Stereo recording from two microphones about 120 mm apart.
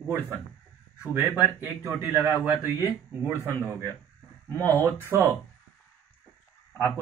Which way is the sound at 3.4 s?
25° right (ahead or behind).